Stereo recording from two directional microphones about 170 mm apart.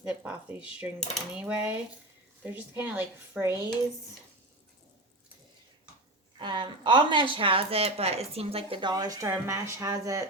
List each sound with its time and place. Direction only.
0.0 s a woman's voice: 10° right (ahead or behind)
6.4 s a woman's voice: 30° right (ahead or behind)